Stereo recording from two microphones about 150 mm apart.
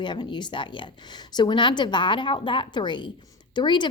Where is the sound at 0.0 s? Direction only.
30° left (ahead or behind).